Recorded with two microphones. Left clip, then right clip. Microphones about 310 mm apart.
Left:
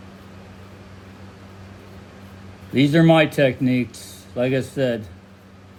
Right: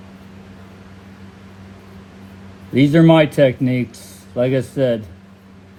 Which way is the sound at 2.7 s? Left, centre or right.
Right.